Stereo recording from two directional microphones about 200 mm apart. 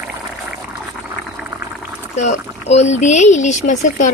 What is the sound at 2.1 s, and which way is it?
Speech, 35° left (ahead or behind).